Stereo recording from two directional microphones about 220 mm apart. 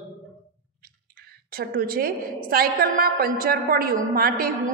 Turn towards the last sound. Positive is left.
turn(degrees=-40)  # may be behind; listen again after turning